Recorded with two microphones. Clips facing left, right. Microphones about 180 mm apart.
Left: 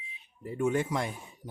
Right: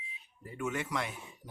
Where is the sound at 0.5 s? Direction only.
35° left (ahead or behind).